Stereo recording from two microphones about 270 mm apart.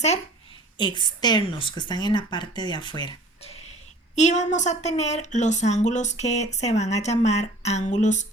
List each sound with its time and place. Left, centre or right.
0.8 s a woman's voice: centre